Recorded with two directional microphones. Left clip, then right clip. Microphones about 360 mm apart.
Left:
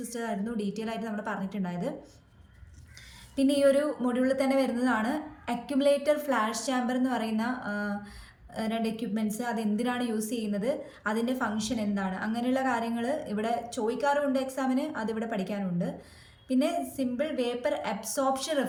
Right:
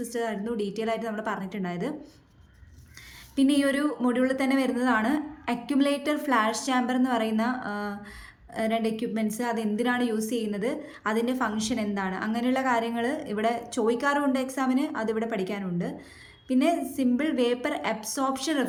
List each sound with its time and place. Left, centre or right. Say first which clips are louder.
0.0 s a woman's voice: right 4 dB; centre
3.3 s a woman's voice: left 1 dB; centre